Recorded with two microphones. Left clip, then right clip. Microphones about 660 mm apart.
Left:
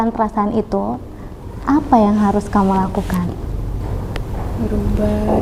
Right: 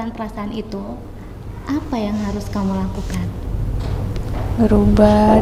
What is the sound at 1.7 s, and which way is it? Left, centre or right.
Speech, left.